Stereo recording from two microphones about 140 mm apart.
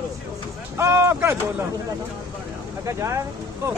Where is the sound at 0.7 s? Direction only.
20° right (ahead or behind).